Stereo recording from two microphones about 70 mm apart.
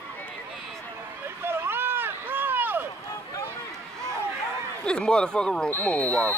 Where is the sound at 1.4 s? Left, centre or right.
Right.